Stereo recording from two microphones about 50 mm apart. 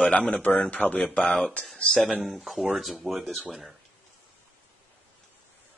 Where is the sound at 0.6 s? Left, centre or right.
Left.